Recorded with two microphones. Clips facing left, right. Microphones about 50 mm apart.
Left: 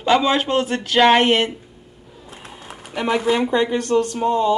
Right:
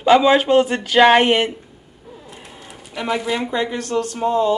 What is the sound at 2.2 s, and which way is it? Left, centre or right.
Sewing machine, left.